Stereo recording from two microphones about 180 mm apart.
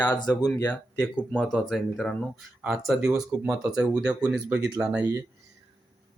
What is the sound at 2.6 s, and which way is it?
Speech, 10° right (ahead or behind).